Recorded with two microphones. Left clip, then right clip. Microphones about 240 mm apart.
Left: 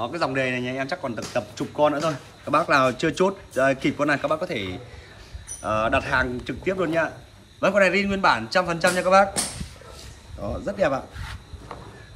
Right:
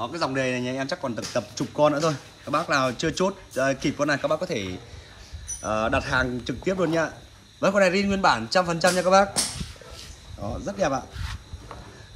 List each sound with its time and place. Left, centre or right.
0.0 s speech: centre
2.4 s a man's voice: centre
10.6 s a man's voice: centre
11.1 s a sound: centre